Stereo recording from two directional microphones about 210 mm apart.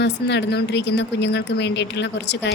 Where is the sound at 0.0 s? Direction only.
55° left (ahead or behind).